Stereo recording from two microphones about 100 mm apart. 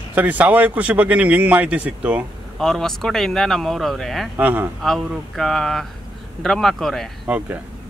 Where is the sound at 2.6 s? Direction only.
5° left (ahead or behind).